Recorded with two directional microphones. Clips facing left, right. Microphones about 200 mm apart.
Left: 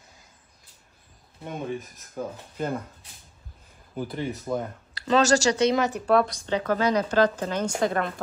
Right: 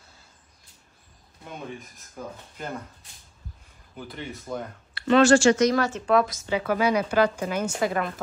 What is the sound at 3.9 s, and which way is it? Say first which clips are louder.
Speech: left 7 dB; 40° left (ahead or behind).